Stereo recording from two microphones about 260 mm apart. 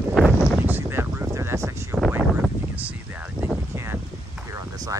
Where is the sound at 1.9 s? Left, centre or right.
Centre.